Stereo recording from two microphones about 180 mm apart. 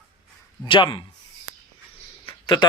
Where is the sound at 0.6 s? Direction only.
25° left (ahead or behind).